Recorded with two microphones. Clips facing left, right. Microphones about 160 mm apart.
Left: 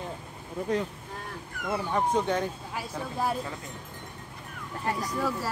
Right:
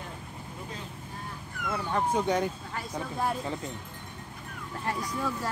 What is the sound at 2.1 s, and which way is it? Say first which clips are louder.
Speech: right 2 dB; 10° right (ahead or behind).